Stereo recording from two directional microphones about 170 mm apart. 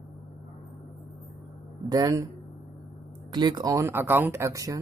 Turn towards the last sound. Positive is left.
turn(degrees=-20)  # may be behind; listen again after turning